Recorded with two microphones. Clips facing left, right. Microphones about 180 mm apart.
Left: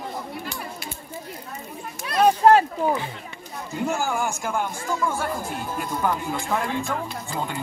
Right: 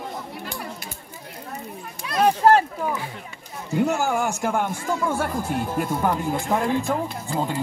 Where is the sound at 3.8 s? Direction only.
65° right (ahead or behind).